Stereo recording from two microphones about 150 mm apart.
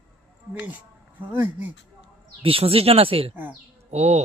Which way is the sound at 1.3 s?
15° right (ahead or behind).